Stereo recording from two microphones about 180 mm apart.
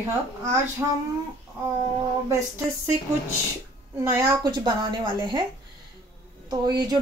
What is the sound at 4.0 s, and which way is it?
A woman's voice, 20° right (ahead or behind).